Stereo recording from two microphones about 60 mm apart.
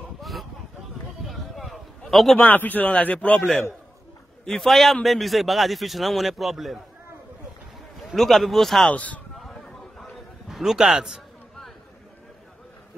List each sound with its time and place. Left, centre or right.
0.2 s a sound: centre
2.5 s speech: left
4.5 s a man's voice: centre
8.0 s a man's voice: centre
8.8 s speech: left
9.4 s a sound: centre